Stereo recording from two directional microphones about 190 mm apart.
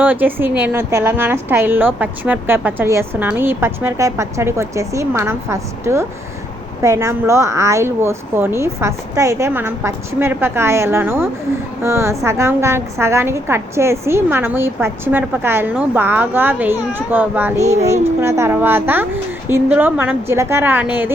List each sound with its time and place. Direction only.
0.0 s a woman's voice: 10° right (ahead or behind)
17.6 s a child's voice: 35° right (ahead or behind)
17.8 s a woman's voice: 15° right (ahead or behind)